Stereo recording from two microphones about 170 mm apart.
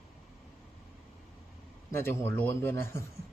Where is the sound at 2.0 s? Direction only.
10° left (ahead or behind).